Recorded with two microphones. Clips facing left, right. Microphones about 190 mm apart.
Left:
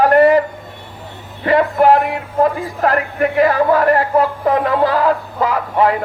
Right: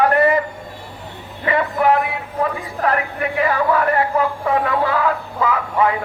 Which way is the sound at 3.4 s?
40° left (ahead or behind).